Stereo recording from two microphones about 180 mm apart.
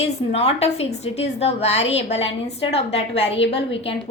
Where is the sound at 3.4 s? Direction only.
80° left.